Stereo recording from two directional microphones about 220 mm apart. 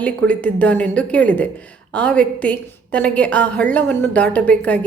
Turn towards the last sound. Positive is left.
turn(degrees=5)  # may be behind; listen again after turning